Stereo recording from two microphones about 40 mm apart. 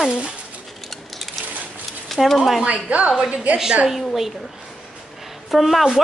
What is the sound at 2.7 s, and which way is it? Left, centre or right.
Speech, right.